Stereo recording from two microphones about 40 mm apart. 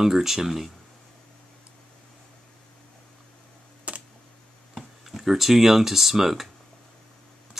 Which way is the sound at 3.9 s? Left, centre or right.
Right.